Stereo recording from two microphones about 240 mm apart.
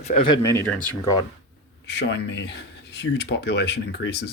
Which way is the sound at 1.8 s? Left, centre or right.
Left.